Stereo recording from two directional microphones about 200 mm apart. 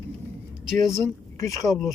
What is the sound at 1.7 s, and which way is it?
Speech, centre (ahead or behind).